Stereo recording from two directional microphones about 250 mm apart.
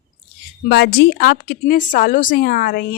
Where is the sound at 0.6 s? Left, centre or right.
Left.